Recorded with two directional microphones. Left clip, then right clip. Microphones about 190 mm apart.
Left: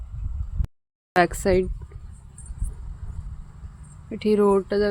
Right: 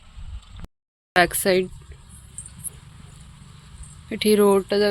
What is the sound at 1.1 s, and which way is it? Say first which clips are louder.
Speech: right 1 dB; 15° left (ahead or behind).